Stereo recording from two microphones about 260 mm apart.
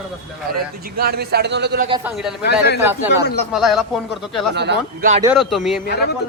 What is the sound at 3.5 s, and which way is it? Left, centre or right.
Speech, centre.